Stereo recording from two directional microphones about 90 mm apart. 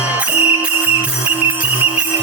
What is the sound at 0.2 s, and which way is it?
Music, 15° right (ahead or behind).